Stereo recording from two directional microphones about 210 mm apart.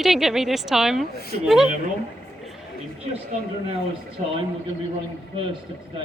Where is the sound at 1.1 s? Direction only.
45° left (ahead or behind).